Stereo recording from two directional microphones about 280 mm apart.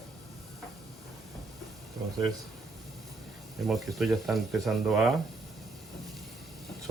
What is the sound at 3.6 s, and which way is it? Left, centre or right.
Speech, centre.